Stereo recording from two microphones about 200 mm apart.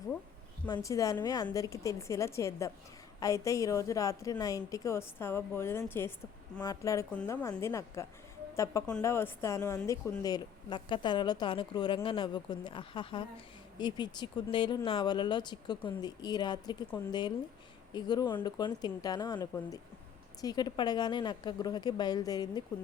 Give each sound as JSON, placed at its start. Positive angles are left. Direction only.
{"t": 0.7, "sound": "a woman's voice", "side_deg": 15}